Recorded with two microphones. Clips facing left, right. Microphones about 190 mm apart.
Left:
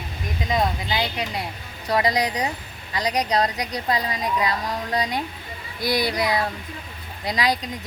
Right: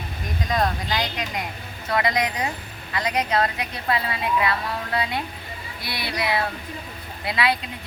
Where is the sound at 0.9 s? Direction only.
30° left (ahead or behind).